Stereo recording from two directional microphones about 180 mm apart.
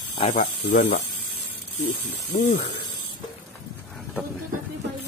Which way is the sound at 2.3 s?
40° left (ahead or behind).